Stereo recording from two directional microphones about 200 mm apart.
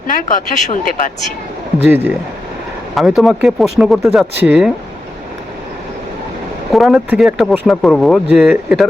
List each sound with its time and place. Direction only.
0.1 s speech: 40° left (ahead or behind)
1.9 s speech: 10° right (ahead or behind)
6.7 s speech: centre (ahead or behind)